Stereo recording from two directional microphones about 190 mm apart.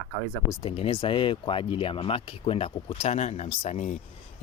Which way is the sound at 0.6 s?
30° left (ahead or behind).